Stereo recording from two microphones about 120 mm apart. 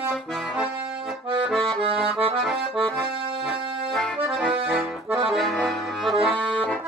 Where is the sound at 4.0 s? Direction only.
Centre (ahead or behind).